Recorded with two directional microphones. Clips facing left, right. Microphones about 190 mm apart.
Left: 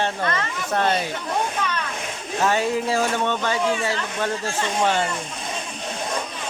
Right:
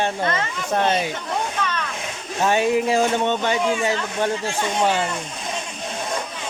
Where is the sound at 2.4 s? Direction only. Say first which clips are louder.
Right 3 dB; 20° right (ahead or behind).